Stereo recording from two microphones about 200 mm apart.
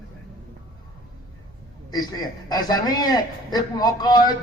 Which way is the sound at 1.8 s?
20° left (ahead or behind).